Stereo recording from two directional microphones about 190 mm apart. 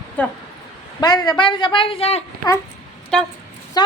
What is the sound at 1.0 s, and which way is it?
A woman's voice, 20° left (ahead or behind).